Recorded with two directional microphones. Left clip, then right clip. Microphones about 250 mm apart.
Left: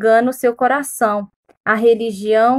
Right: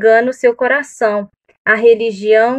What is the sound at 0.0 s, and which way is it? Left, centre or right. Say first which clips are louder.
A woman's voice: right 3 dB; left.